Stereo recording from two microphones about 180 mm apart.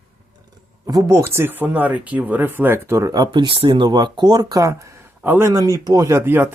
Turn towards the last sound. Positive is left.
turn(degrees=-10)  # may be behind; listen again after turning